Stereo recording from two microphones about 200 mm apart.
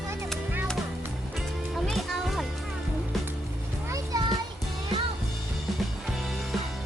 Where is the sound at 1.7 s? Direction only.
Centre (ahead or behind).